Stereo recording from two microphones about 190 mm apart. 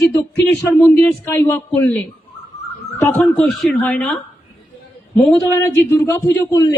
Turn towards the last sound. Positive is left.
turn(degrees=20)  # may be behind; listen again after turning